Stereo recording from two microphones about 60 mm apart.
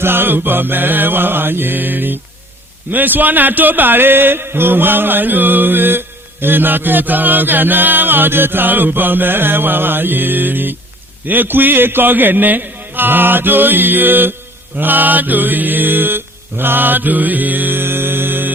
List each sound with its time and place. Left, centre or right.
0.0 s music: right
14.8 s mantra: right